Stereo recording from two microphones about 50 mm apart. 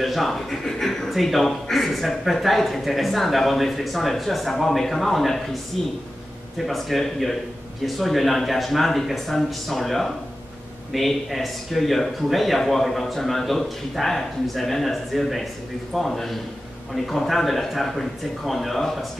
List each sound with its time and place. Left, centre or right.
0.0 s speech: centre
6.6 s speech: centre